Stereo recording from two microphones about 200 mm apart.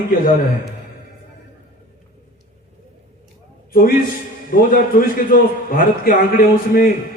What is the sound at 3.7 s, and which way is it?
A man's voice, 45° left (ahead or behind).